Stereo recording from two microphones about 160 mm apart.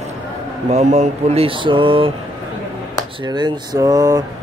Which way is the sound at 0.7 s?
45° right (ahead or behind).